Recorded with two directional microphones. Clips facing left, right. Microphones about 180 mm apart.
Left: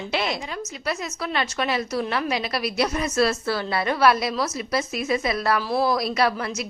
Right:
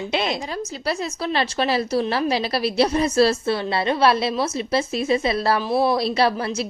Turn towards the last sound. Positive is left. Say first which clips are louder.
# right 3 dB
turn(degrees=-30)  # may be behind; listen again after turning